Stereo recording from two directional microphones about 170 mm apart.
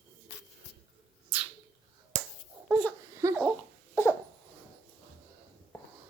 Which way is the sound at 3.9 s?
15° left (ahead or behind).